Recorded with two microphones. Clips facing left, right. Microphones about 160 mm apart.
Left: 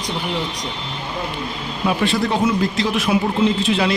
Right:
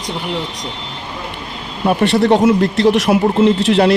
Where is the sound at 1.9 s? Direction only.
70° right (ahead or behind).